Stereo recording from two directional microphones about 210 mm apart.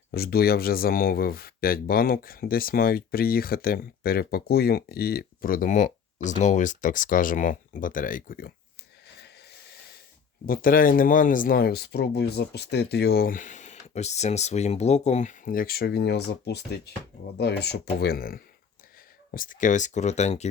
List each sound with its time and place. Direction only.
0.1 s speech: 45° left (ahead or behind)
10.4 s speech: 45° left (ahead or behind)